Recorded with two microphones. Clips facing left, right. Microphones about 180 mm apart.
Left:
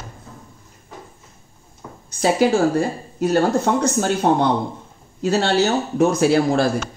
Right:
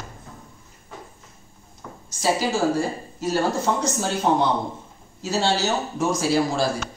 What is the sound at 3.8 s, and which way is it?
A man's voice, 60° left (ahead or behind).